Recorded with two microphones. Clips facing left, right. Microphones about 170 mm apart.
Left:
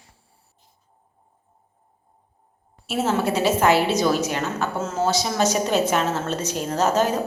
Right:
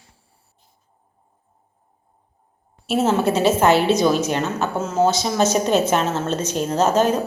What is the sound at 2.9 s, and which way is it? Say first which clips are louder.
A woman's voice: right 4 dB; 25° right (ahead or behind).